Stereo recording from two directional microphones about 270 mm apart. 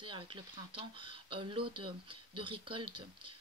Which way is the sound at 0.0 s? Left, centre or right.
Centre.